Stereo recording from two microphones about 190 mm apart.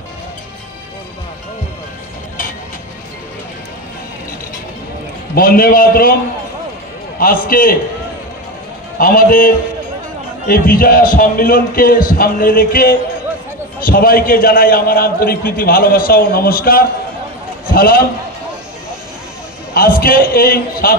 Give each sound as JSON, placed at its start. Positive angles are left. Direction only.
{"t": 5.3, "sound": "a man's voice", "side_deg": 50}
{"t": 7.2, "sound": "a man's voice", "side_deg": 50}
{"t": 8.9, "sound": "a man's voice", "side_deg": 50}
{"t": 19.7, "sound": "a man's voice", "side_deg": 50}